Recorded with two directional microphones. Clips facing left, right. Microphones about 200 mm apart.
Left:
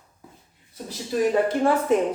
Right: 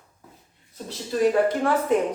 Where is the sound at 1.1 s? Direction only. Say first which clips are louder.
Right 1 dB; 10° left (ahead or behind).